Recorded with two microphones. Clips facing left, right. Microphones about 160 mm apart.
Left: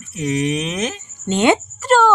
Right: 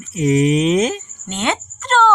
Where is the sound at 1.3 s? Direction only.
15° left (ahead or behind).